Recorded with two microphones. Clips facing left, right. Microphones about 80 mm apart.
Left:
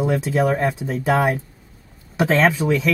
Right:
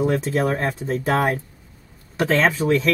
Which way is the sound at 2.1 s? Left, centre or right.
Left.